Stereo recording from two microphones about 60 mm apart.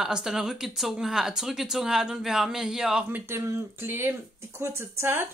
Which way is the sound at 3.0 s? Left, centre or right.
Right.